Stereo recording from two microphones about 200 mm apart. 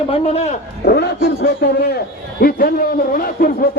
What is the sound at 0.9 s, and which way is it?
A man's voice, 50° left (ahead or behind).